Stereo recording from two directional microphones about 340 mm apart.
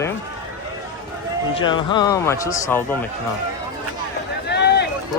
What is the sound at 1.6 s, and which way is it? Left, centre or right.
Speech, centre.